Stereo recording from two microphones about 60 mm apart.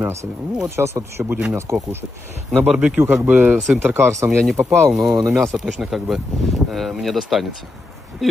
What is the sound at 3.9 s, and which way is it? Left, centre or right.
Speech, right.